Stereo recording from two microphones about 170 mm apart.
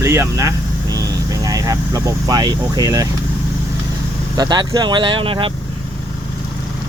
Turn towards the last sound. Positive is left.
turn(degrees=-30)  # may be behind; listen again after turning